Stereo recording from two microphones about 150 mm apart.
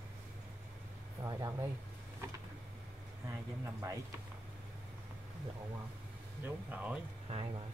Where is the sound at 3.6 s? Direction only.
20° right (ahead or behind).